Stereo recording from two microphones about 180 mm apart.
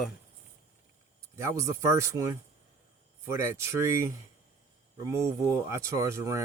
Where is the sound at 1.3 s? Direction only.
15° right (ahead or behind).